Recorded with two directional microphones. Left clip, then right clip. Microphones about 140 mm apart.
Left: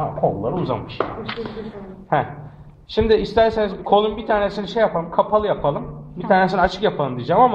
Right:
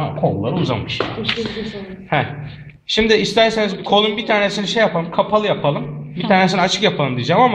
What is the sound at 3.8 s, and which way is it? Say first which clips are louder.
Speech: right 1 dB; 5° right (ahead or behind).